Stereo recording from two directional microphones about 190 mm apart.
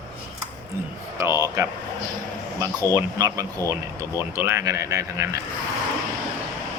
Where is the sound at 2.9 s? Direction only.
20° right (ahead or behind).